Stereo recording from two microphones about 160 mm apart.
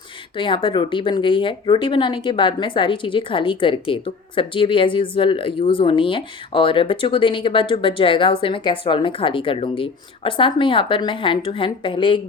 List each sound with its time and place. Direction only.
0.3 s speech: 30° left (ahead or behind)